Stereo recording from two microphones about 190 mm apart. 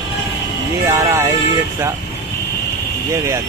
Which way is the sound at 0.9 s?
15° right (ahead or behind).